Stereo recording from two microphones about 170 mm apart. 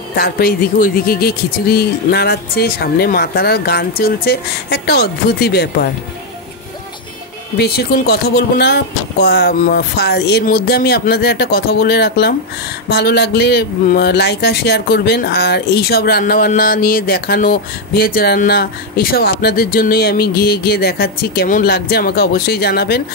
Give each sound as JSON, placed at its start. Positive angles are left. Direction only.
{"t": 0.1, "sound": "speech", "side_deg": 60}
{"t": 7.5, "sound": "speech", "side_deg": 70}